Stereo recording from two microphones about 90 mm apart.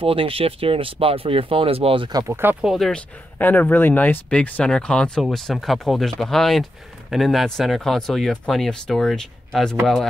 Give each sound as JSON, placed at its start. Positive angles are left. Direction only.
{"t": 0.0, "sound": "speech", "side_deg": -90}
{"t": 2.2, "sound": "speech", "side_deg": -25}
{"t": 2.6, "sound": "speech", "side_deg": -5}
{"t": 2.9, "sound": "speech", "side_deg": 20}